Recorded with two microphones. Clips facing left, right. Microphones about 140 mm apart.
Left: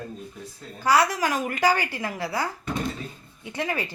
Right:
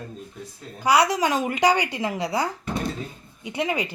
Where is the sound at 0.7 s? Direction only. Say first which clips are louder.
Right 2 dB; 15° right (ahead or behind).